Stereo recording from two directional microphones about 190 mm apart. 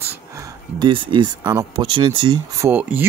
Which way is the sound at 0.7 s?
25° right (ahead or behind).